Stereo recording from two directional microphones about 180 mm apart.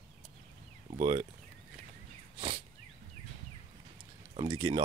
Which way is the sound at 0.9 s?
25° right (ahead or behind).